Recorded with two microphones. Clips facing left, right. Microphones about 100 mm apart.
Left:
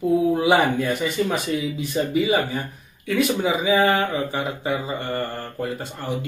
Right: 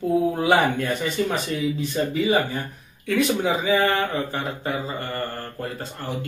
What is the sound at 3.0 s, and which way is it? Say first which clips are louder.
Speech: even; centre (ahead or behind).